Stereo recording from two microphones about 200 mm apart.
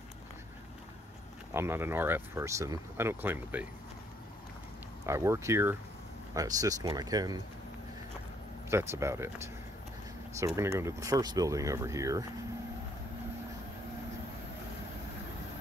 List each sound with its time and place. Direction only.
1.5 s speech: 10° right (ahead or behind)
5.0 s speech: 15° right (ahead or behind)
8.6 s speech: 15° right (ahead or behind)